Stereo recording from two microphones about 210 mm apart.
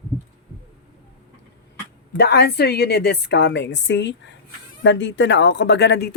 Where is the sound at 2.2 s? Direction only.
50° left (ahead or behind).